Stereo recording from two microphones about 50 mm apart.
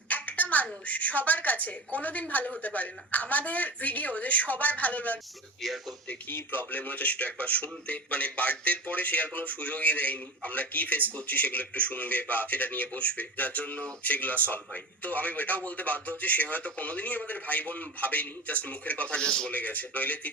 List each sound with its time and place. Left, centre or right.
0.1 s a sound: left
0.5 s speech: left
5.6 s speech: centre
6.2 s a man's voice: left; by 19.5 s centre
19.5 s speech: left